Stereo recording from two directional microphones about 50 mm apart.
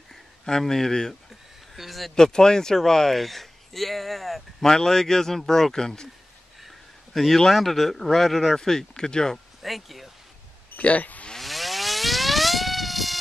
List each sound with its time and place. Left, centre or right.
0.1 s speech: centre
2.1 s speech: centre
7.2 s speech: centre
9.6 s speech: centre
10.8 s speech: left
11.3 s a sound: centre